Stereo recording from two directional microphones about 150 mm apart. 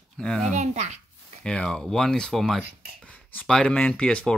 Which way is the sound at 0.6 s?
50° right (ahead or behind).